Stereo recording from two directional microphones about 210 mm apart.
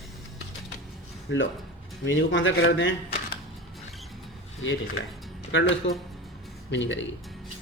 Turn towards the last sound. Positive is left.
turn(degrees=60)  # may be behind; listen again after turning